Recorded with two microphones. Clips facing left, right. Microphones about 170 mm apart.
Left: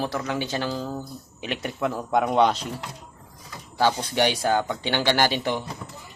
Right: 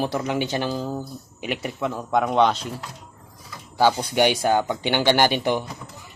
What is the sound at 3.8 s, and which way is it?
Speech, 10° right (ahead or behind).